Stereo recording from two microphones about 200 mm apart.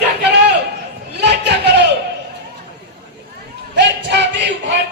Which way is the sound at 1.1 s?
60° right (ahead or behind).